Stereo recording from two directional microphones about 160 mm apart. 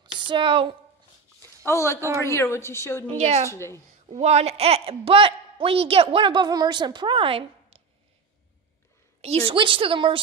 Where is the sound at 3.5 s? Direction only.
15° left (ahead or behind).